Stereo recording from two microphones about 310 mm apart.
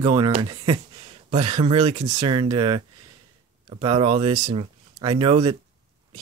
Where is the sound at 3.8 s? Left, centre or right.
Centre.